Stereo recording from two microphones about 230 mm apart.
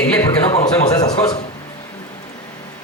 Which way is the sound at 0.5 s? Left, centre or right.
Centre.